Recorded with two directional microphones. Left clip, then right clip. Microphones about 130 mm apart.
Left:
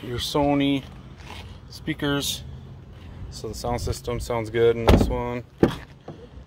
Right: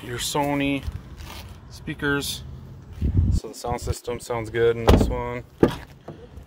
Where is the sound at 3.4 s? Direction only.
60° left (ahead or behind).